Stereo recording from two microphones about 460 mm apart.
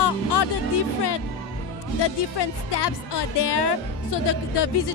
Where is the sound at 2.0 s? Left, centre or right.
Left.